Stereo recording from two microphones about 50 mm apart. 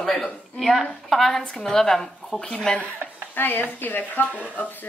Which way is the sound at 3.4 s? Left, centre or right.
Left.